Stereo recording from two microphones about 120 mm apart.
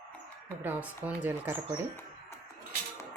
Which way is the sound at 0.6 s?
15° right (ahead or behind).